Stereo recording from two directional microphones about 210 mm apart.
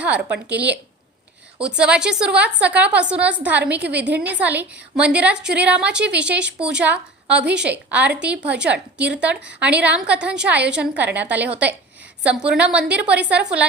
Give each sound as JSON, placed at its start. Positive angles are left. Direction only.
{"t": 0.0, "sound": "a woman's voice", "side_deg": -5}
{"t": 0.3, "sound": "a woman's voice", "side_deg": -55}
{"t": 1.5, "sound": "a woman's voice", "side_deg": -5}